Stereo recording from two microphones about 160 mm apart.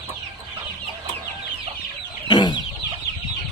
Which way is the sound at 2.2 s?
30° left (ahead or behind).